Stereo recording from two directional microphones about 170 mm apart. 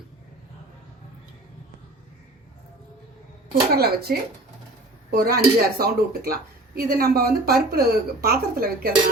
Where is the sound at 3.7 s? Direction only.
70° right (ahead or behind).